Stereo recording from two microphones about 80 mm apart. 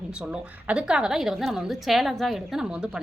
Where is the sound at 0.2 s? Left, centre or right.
Centre.